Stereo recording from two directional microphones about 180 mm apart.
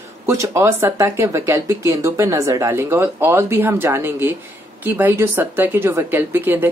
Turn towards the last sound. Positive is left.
turn(degrees=-10)  # may be behind; listen again after turning